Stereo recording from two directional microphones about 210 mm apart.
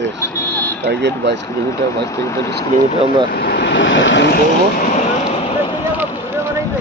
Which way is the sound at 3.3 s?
50° left (ahead or behind).